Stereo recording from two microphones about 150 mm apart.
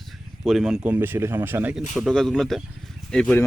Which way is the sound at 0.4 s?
Centre (ahead or behind).